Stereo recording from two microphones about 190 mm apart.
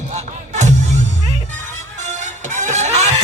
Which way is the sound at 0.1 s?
40° right (ahead or behind).